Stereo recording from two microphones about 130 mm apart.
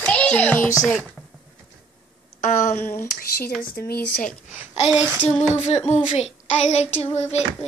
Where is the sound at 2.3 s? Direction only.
75° left (ahead or behind).